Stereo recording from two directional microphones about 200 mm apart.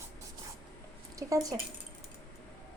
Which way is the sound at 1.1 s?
15° right (ahead or behind).